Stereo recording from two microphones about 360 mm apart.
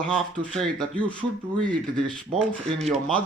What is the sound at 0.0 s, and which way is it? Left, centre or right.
Speech, centre.